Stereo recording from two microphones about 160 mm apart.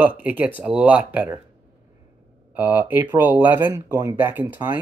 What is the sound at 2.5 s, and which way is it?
Speech, 10° right (ahead or behind).